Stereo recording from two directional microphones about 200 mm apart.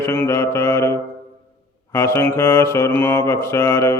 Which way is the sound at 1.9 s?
15° left (ahead or behind).